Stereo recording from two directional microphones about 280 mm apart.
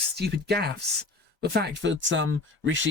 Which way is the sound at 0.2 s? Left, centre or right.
Right.